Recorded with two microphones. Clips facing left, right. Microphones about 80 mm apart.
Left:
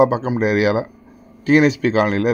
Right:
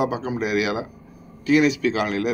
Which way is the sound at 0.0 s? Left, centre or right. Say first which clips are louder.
Left 8 dB; left.